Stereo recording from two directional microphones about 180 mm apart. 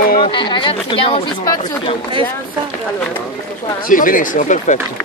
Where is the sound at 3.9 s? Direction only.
50° left (ahead or behind).